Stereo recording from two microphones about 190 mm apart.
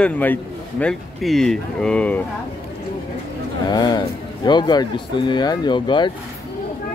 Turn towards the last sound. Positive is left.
turn(degrees=25)  # may be behind; listen again after turning